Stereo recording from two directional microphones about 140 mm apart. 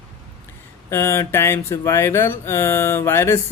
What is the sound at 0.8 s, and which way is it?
Speech, 20° left (ahead or behind).